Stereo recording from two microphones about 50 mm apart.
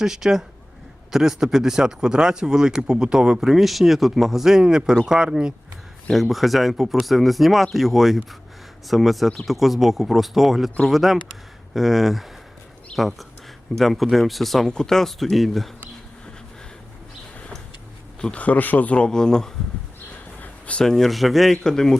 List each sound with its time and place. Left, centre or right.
0.0 s speech: centre
3.4 s speech: centre
6.1 s speech: centre
18.3 s speech: left; by 19.5 s centre
20.4 s a sound: left
20.8 s speech: centre
21.6 s speech: centre